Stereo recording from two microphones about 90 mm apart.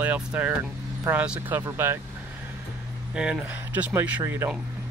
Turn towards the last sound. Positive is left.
turn(degrees=-30)  # may be behind; listen again after turning